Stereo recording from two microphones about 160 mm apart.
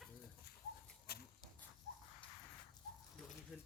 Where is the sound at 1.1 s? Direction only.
80° left.